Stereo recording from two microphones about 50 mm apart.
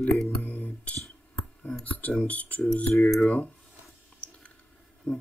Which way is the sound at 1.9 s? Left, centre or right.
Left.